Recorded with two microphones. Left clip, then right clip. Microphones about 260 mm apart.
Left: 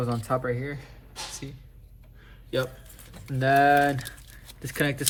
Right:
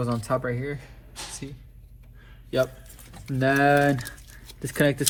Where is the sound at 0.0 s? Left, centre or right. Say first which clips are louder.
Right 1 dB; right.